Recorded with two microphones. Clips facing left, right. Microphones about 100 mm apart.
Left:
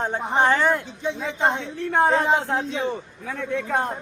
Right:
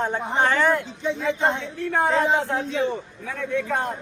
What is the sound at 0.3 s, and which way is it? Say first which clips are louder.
A man's voice: left 1 dB; 20° left (ahead or behind).